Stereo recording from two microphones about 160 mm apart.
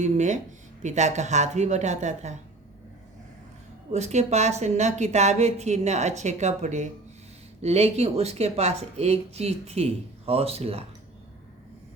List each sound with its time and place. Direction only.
0.0 s a woman's voice: 50° right (ahead or behind)
3.9 s a woman's voice: 45° right (ahead or behind)